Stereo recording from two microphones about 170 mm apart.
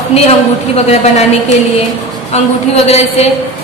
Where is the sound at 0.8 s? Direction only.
40° left (ahead or behind).